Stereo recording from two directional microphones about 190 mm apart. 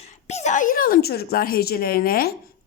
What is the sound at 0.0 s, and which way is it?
A woman's voice, 35° left (ahead or behind).